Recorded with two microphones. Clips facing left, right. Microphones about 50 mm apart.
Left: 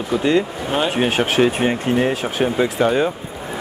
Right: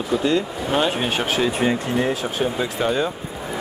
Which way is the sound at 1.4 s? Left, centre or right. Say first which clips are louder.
Left 3 dB; left.